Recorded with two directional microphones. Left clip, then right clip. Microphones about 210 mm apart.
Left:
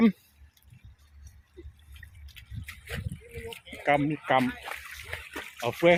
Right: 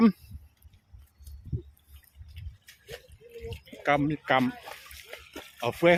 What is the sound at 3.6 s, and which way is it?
Splash, 5° right (ahead or behind).